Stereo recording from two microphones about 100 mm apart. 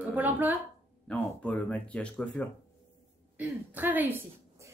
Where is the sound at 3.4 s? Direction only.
15° right (ahead or behind).